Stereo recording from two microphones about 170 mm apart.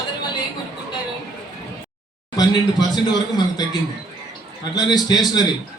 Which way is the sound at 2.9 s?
25° left (ahead or behind).